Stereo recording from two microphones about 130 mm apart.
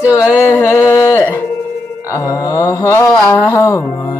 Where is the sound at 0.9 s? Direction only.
20° left (ahead or behind).